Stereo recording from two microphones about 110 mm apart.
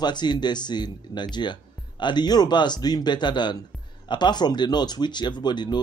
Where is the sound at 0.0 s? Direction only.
40° left (ahead or behind).